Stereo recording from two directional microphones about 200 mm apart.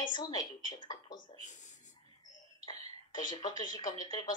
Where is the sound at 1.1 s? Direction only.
35° left (ahead or behind).